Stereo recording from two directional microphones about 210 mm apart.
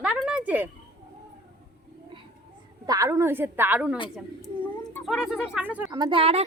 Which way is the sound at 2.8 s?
15° right (ahead or behind).